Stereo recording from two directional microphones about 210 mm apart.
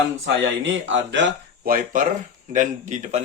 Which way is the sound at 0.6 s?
60° right (ahead or behind).